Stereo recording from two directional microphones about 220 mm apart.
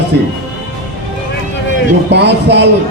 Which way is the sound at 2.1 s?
50° right (ahead or behind).